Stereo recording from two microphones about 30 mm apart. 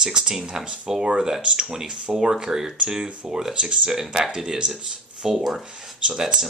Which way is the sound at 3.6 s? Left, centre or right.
Right.